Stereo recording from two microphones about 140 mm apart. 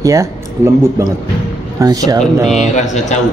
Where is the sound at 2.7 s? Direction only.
60° left (ahead or behind).